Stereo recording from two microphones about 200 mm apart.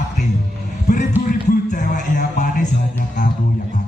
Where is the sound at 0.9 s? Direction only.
35° left (ahead or behind).